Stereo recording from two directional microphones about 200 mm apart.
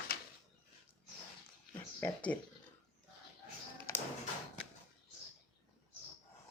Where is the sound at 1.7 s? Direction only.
10° left (ahead or behind).